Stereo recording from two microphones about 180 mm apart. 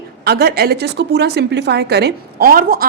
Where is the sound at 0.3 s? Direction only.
65° right (ahead or behind).